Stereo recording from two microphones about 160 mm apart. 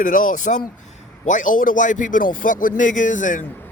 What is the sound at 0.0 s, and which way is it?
A man's voice, 55° left (ahead or behind).